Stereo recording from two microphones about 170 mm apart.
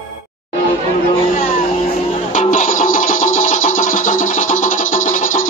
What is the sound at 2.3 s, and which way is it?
Music, 45° left (ahead or behind).